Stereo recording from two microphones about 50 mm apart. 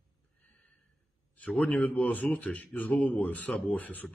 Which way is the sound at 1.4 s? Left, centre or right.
Left.